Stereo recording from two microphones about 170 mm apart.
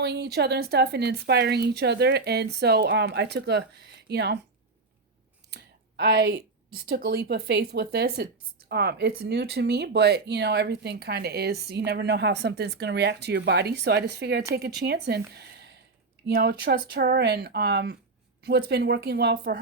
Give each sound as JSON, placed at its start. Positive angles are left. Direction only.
{"t": 0.0, "sound": "a woman's voice", "side_deg": -80}
{"t": 5.5, "sound": "speech", "side_deg": -70}